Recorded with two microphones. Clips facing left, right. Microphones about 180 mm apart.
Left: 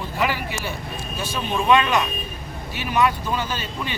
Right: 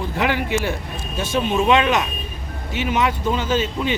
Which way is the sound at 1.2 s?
20° right (ahead or behind).